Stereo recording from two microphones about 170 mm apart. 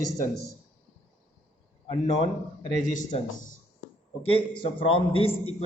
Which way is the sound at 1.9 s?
30° left (ahead or behind).